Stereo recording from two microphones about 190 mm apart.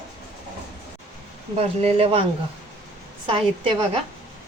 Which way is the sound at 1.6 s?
30° right (ahead or behind).